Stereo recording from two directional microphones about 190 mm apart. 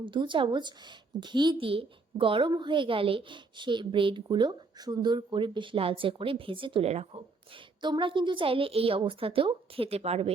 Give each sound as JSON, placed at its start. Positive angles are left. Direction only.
{"t": 0.0, "sound": "a woman's voice", "side_deg": -25}